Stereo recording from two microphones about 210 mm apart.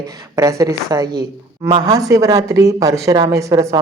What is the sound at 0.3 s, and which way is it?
Speech, 15° right (ahead or behind).